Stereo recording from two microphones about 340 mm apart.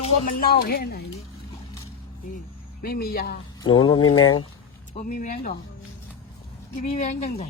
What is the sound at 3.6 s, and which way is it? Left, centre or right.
Mantra, centre.